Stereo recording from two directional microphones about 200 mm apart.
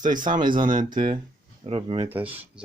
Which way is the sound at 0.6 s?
20° right (ahead or behind).